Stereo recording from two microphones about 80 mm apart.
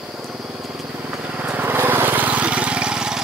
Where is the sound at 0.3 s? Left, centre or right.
Centre.